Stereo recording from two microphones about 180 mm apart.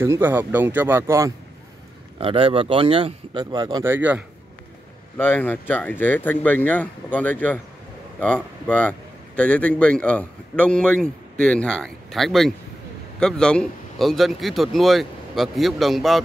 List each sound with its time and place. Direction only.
0.0 s speech: 10° right (ahead or behind)
2.1 s speech: 30° right (ahead or behind); by 4.2 s 10° right (ahead or behind)
5.1 s a man's voice: 10° left (ahead or behind)